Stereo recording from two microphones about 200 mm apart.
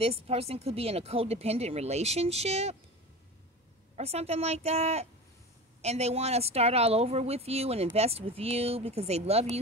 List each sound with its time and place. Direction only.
0.0 s speech: 30° right (ahead or behind)
3.9 s speech: 30° right (ahead or behind)